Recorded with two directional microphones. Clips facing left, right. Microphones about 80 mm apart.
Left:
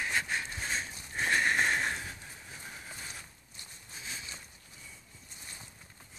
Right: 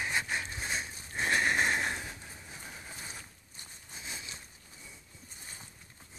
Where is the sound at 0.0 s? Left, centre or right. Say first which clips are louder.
Even; centre.